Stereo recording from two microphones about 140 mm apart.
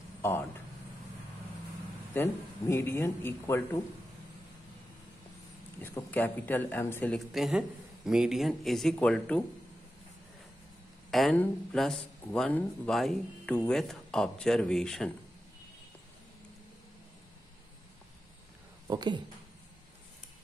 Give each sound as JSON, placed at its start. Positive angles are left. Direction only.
{"t": 0.2, "sound": "speech", "side_deg": 15}
{"t": 2.1, "sound": "speech", "side_deg": 15}
{"t": 5.8, "sound": "speech", "side_deg": 15}
{"t": 7.3, "sound": "speech", "side_deg": -5}
{"t": 11.1, "sound": "speech", "side_deg": 0}
{"t": 18.9, "sound": "a woman's voice", "side_deg": -30}